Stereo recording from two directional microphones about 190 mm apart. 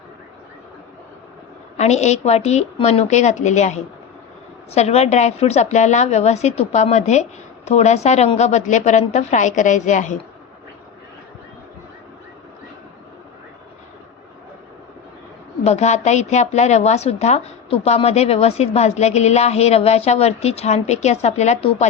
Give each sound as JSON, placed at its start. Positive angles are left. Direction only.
{"t": 1.7, "sound": "a woman's voice", "side_deg": 35}
{"t": 15.6, "sound": "a woman's voice", "side_deg": 35}